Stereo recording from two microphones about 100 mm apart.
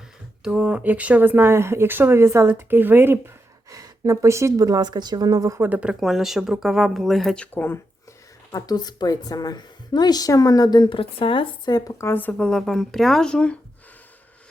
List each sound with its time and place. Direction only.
0.4 s speech: 10° right (ahead or behind)
3.7 s a woman's voice: 35° right (ahead or behind)
5.5 s speech: 15° right (ahead or behind); by 7.4 s centre (ahead or behind)
7.5 s speech: 20° left (ahead or behind)
8.5 s a woman's voice: 40° left (ahead or behind); by 11.7 s 60° left (ahead or behind)
11.7 s speech: 30° left (ahead or behind); by 13.6 s 10° left (ahead or behind)